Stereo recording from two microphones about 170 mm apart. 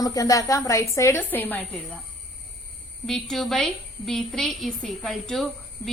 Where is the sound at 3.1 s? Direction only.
Centre (ahead or behind).